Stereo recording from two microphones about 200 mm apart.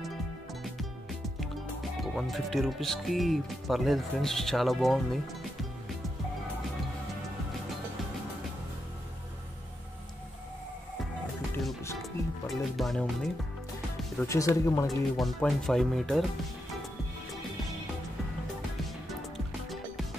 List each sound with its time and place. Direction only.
1.4 s speech: centre (ahead or behind)
12.0 s music: centre (ahead or behind)
14.1 s speech: 15° left (ahead or behind)
14.9 s speech: centre (ahead or behind)